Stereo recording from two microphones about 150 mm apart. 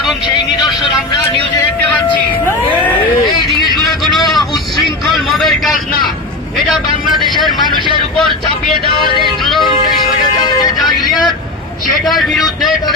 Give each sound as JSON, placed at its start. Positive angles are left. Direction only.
{"t": 3.6, "sound": "vehicle", "side_deg": 0}
{"t": 7.1, "sound": "vehicle", "side_deg": -30}
{"t": 10.4, "sound": "music", "side_deg": 30}
{"t": 12.0, "sound": "a man's voice", "side_deg": 0}